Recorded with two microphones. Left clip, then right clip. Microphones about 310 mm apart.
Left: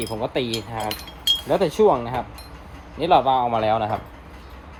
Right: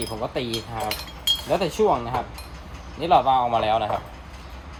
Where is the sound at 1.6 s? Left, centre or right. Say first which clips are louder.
Left 3 dB; centre.